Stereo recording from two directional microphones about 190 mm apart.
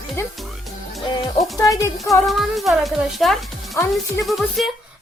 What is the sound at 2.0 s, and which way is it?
A woman's voice, centre (ahead or behind).